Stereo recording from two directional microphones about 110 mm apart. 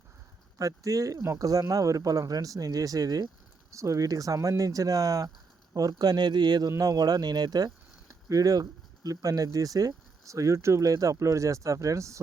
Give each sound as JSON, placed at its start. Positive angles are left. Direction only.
{"t": 0.6, "sound": "speech", "side_deg": -30}